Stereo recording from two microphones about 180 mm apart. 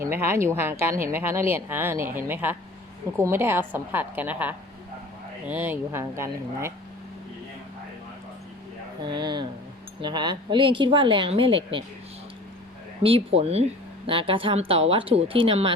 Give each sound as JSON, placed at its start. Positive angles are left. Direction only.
{"t": 0.0, "sound": "a woman's voice", "side_deg": -15}
{"t": 9.0, "sound": "a woman's voice", "side_deg": -25}
{"t": 13.0, "sound": "a woman's voice", "side_deg": -30}